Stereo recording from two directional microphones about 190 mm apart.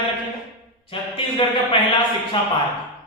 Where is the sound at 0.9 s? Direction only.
30° left (ahead or behind).